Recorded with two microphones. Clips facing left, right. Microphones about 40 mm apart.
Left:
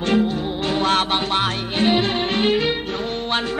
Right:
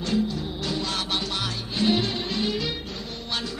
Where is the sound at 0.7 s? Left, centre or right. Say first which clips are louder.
Left 11 dB; left.